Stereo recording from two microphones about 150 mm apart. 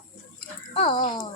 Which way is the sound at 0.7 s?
35° left (ahead or behind).